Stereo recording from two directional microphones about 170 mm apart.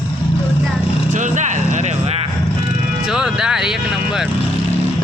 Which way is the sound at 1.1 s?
45° right (ahead or behind).